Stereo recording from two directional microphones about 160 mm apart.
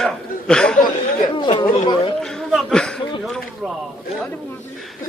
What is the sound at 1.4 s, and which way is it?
Chatter, 30° left (ahead or behind).